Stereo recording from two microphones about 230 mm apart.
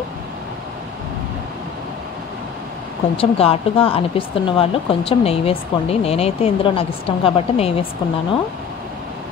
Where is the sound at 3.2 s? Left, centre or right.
Left.